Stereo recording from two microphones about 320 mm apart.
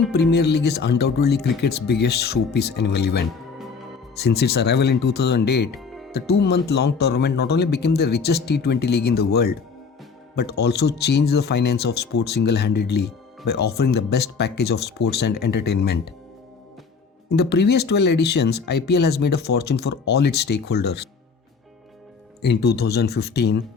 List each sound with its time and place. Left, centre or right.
0.1 s speech: left
5.8 s music: centre
6.1 s speech: left
17.2 s speech: left
22.4 s speech: left